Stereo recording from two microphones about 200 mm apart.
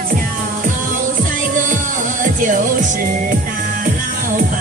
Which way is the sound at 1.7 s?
40° right (ahead or behind).